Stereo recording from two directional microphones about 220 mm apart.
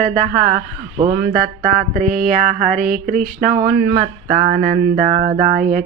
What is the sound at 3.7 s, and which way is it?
Speech, 50° right (ahead or behind).